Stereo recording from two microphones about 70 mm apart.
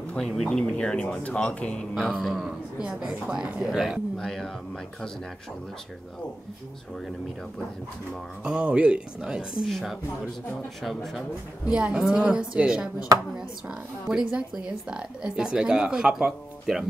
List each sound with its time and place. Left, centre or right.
0.2 s speech: centre
2.0 s speech: centre
4.2 s speech: centre
8.5 s speech: centre
9.7 s speech: centre
11.7 s speech: centre